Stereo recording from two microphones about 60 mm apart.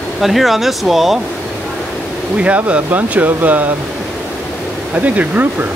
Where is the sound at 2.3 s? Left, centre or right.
Right.